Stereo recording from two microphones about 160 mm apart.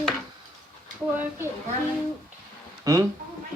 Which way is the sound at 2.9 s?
20° right (ahead or behind).